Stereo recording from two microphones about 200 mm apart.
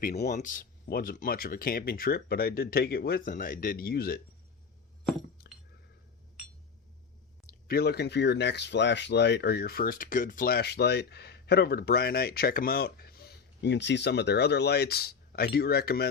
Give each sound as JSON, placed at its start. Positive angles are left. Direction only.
{"t": 0.0, "sound": "speech", "side_deg": 50}
{"t": 0.3, "sound": "speech", "side_deg": 40}
{"t": 5.4, "sound": "chink", "side_deg": 50}
{"t": 7.7, "sound": "speech", "side_deg": 55}